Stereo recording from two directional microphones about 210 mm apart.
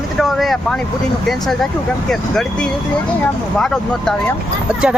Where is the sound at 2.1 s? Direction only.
5° left (ahead or behind).